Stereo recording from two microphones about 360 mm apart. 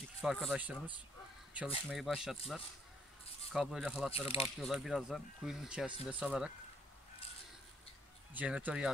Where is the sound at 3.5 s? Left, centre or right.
Centre.